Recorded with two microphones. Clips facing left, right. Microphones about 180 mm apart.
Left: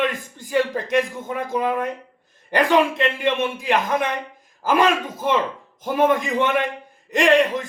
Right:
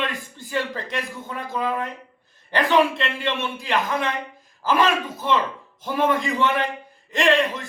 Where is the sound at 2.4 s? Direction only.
15° left (ahead or behind).